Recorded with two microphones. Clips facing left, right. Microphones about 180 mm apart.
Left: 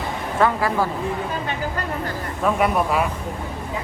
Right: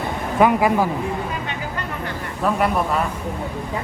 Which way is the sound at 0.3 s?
15° right (ahead or behind).